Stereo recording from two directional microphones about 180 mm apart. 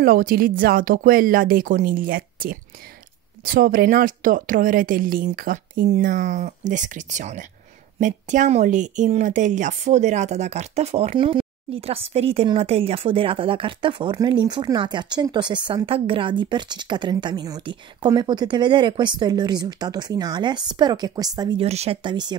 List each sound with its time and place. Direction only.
0.0 s a woman's voice: 50° right (ahead or behind); by 22.1 s 35° right (ahead or behind)